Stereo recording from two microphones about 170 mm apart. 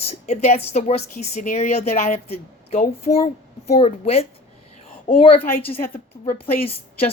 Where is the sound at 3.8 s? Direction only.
35° left (ahead or behind).